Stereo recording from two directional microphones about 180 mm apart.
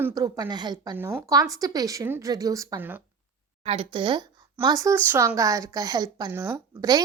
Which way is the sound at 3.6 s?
30° right (ahead or behind).